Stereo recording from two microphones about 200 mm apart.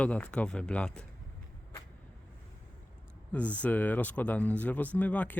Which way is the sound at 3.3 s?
5° left (ahead or behind).